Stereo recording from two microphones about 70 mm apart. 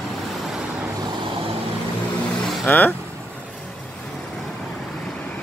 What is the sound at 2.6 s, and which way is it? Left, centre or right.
Speech, left.